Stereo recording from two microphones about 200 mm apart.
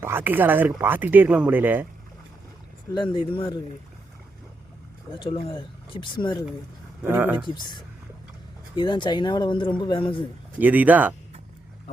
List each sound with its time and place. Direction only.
0.0 s speech: 10° right (ahead or behind)
2.9 s speech: 25° left (ahead or behind)
5.2 s speech: 25° left (ahead or behind)
7.0 s speech: 10° right (ahead or behind)
8.7 s speech: 25° left (ahead or behind)
10.6 s speech: 10° right (ahead or behind)